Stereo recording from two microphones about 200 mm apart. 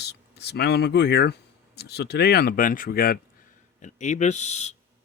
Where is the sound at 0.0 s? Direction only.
55° left (ahead or behind).